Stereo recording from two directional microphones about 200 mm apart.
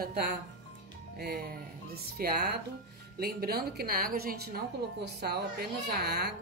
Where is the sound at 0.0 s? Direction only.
50° right (ahead or behind).